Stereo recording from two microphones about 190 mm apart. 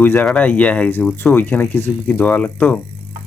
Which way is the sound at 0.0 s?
10° left (ahead or behind).